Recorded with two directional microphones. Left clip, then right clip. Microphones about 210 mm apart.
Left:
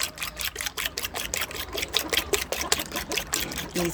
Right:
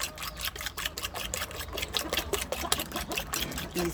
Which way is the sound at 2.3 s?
5° left (ahead or behind).